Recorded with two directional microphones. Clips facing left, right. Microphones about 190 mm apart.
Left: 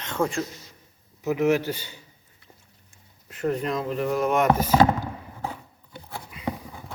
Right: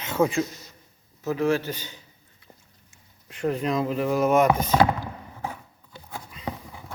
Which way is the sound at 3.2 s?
Centre (ahead or behind).